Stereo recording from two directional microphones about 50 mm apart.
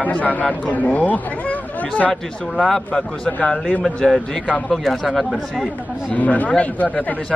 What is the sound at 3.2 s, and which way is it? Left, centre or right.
Speech, centre.